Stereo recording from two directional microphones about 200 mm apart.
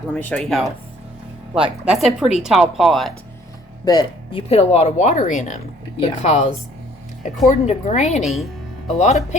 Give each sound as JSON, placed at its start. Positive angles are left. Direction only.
{"t": 0.1, "sound": "speech", "side_deg": 5}
{"t": 3.8, "sound": "speech", "side_deg": 25}